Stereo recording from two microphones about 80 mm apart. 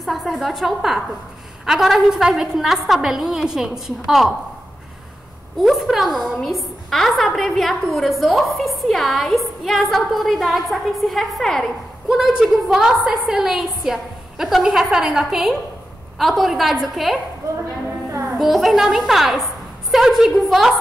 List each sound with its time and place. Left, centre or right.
0.0 s a woman's voice: centre
5.6 s a woman's voice: centre
17.4 s speech: right
18.4 s a woman's voice: centre